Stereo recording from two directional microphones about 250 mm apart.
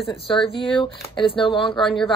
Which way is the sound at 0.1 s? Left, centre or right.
Centre.